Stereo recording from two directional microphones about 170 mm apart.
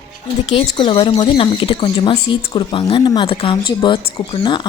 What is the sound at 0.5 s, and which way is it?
Speech, 30° left (ahead or behind).